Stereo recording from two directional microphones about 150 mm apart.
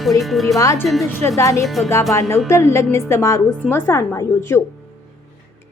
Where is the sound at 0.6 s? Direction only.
20° left (ahead or behind).